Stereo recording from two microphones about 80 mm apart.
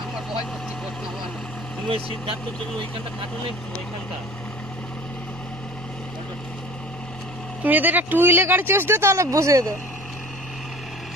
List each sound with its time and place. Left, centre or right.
7.6 s speech: right